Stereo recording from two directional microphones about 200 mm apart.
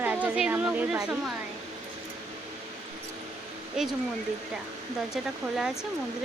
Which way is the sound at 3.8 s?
5° right (ahead or behind).